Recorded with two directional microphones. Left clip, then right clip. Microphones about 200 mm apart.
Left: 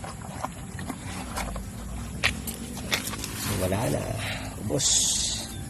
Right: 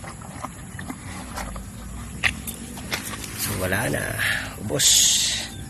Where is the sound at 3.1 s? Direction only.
5° left (ahead or behind).